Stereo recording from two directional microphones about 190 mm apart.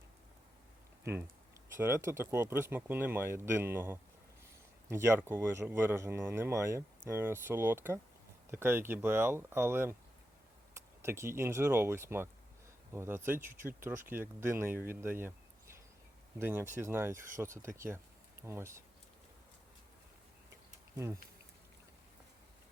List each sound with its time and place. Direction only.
1.8 s speech: 15° right (ahead or behind)
14.8 s a sound: 10° right (ahead or behind)
16.4 s speech: 10° right (ahead or behind)
20.9 s speech: 15° right (ahead or behind)